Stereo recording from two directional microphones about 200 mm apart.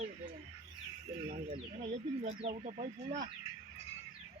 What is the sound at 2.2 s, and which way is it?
Speech, 30° right (ahead or behind).